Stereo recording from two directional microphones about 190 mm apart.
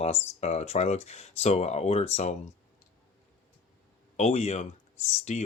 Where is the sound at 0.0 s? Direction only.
35° left (ahead or behind).